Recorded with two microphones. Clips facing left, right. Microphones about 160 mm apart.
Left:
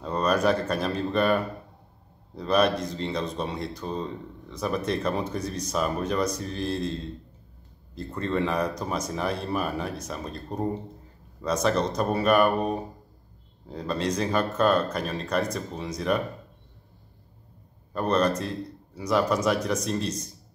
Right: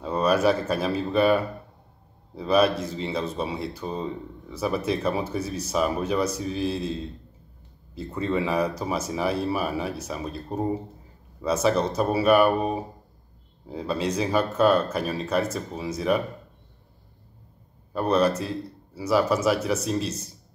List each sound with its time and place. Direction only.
0.0 s speech: 5° right (ahead or behind)
17.9 s speech: 5° right (ahead or behind)